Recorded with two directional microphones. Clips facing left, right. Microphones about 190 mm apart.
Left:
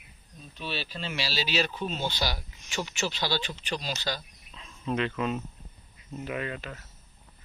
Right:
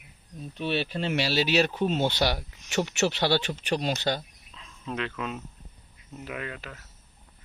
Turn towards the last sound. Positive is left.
turn(degrees=0)  # may be behind; listen again after turning